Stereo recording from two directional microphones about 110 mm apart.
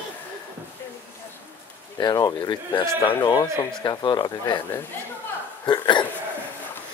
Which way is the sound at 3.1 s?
30° left (ahead or behind).